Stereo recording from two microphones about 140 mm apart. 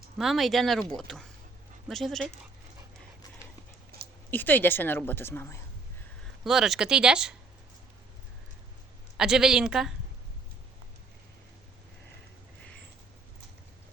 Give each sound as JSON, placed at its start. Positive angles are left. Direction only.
{"t": 0.2, "sound": "speech", "side_deg": 0}
{"t": 3.9, "sound": "a sound", "side_deg": -90}
{"t": 4.3, "sound": "a woman's voice", "side_deg": 15}
{"t": 6.4, "sound": "speech", "side_deg": 0}
{"t": 9.1, "sound": "speech", "side_deg": -5}